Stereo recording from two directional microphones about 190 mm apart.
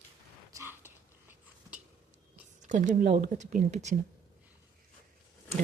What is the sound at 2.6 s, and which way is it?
Speech, 40° right (ahead or behind).